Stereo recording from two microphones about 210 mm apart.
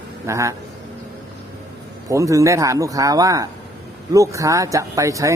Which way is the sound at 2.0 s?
15° right (ahead or behind).